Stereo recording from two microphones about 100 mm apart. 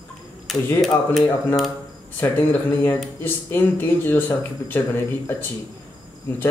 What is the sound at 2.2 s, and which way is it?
Speech, 20° left (ahead or behind).